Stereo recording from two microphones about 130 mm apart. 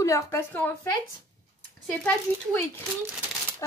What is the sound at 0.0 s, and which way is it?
Speech, 20° left (ahead or behind).